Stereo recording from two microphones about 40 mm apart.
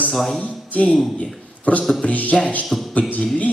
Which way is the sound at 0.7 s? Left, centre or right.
Left.